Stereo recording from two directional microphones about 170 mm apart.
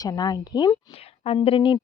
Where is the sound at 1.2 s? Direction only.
35° left (ahead or behind).